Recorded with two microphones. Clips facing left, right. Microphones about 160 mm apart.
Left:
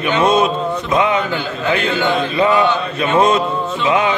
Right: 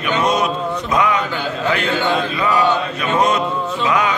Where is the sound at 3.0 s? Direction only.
25° left (ahead or behind).